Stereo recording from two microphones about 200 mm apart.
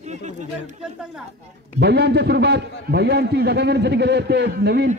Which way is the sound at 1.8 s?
55° right (ahead or behind).